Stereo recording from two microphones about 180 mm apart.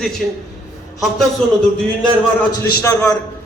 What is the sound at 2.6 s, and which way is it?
Speech, 15° left (ahead or behind).